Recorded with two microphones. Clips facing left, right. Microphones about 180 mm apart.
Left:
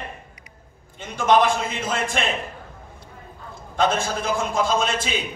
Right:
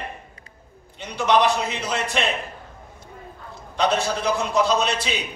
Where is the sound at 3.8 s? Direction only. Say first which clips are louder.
Even; 45° left (ahead or behind).